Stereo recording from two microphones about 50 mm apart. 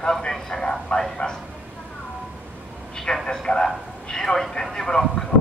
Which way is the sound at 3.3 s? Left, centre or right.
Centre.